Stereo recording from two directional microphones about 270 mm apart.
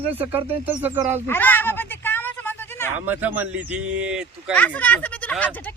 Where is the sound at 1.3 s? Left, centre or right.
Centre.